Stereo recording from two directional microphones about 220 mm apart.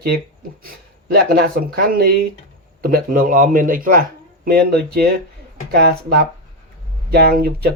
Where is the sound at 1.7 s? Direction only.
45° right (ahead or behind).